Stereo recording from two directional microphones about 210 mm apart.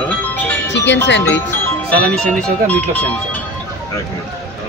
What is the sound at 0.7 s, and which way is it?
Music, 55° left (ahead or behind).